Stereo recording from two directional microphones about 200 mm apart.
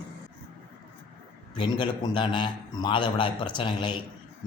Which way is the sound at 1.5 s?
25° left (ahead or behind).